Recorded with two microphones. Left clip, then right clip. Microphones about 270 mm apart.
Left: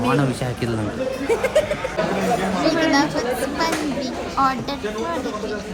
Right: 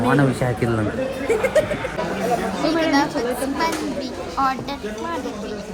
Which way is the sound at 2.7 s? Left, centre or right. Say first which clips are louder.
Even; centre.